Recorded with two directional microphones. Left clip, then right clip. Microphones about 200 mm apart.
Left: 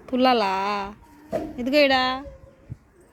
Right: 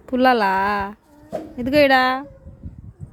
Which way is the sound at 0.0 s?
35° right (ahead or behind).